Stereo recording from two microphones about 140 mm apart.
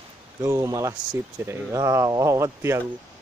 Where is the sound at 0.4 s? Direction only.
20° right (ahead or behind).